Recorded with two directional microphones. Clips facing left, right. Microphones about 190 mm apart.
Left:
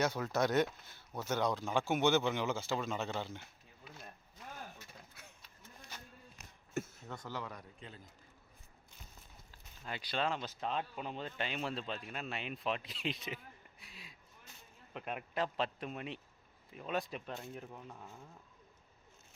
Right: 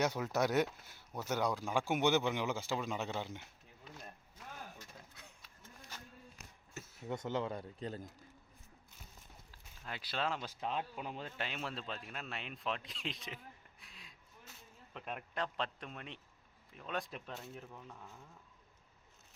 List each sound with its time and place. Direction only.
0.0 s speech: 15° right (ahead or behind)
3.8 s a sound: 5° left (ahead or behind)
7.0 s speech: 20° right (ahead or behind); by 8.0 s 40° right (ahead or behind)
9.5 s a man's voice: centre (ahead or behind)
17.7 s a man's voice: 15° left (ahead or behind)